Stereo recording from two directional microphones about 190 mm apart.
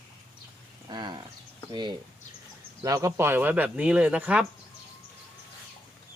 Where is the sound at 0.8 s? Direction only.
25° right (ahead or behind).